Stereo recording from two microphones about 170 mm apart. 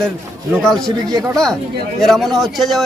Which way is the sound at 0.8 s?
20° right (ahead or behind).